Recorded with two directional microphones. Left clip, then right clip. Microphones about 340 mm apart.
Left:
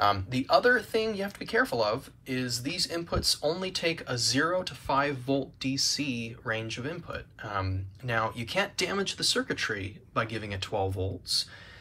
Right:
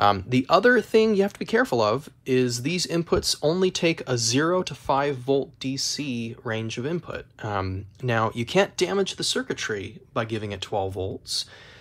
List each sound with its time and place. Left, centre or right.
0.0 s speech: centre
3.2 s speech: right
3.5 s speech: centre